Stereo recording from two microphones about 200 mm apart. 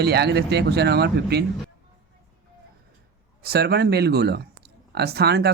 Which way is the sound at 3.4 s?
55° right (ahead or behind).